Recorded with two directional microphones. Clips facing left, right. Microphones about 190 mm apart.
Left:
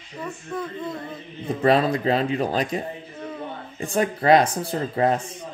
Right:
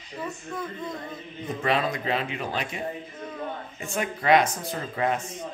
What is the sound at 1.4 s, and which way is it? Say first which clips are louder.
A man's voice: left 7 dB; 35° left (ahead or behind).